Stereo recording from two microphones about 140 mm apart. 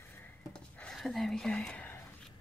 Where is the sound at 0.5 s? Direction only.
5° left (ahead or behind).